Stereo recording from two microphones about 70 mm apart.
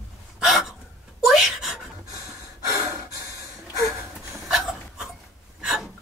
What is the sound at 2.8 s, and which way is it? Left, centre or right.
Gasp, right.